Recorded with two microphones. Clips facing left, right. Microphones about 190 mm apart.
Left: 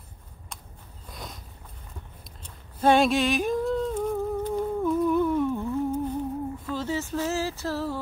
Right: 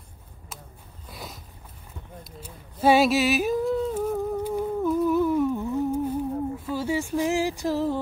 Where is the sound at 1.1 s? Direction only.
5° right (ahead or behind).